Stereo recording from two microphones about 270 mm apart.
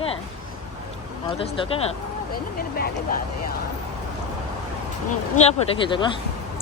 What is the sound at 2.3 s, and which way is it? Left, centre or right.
Speech, left.